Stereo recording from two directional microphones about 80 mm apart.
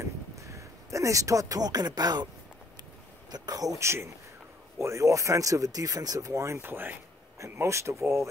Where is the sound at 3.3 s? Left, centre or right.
Right.